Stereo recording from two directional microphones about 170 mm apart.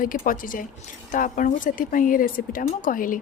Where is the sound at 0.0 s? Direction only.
55° left (ahead or behind).